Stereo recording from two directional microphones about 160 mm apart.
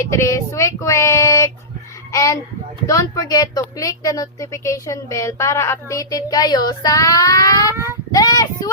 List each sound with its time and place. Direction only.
0.1 s a woman's voice: 20° left (ahead or behind)